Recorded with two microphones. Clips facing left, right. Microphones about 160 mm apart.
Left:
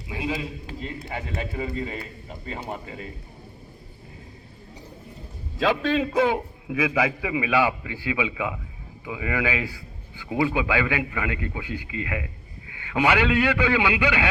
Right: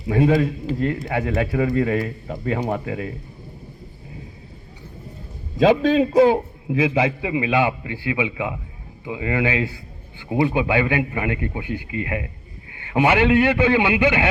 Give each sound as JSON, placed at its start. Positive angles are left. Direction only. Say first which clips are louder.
{"t": 0.1, "sound": "a man's voice", "louder": "right 12 dB", "side_deg": -55}
{"t": 5.5, "sound": "a man's voice", "louder": "right 7 dB", "side_deg": -45}